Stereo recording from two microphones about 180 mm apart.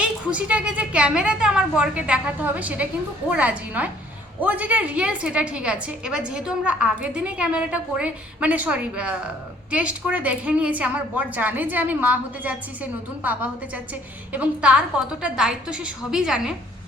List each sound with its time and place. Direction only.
0.0 s a woman's voice: 5° right (ahead or behind)